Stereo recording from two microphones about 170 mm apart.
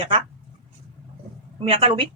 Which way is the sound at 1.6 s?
35° right (ahead or behind).